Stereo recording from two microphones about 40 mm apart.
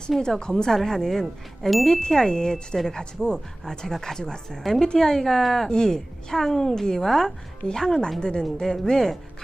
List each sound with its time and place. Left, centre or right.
0.2 s a woman's voice: centre